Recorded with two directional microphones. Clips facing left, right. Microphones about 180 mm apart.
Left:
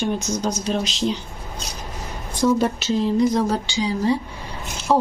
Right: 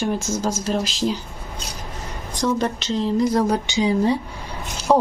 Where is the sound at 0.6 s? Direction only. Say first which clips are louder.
Even; centre (ahead or behind).